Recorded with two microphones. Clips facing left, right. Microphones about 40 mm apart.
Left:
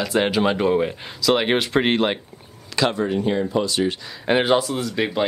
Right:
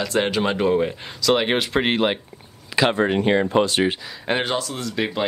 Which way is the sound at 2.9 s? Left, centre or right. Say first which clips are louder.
Right 3 dB; right.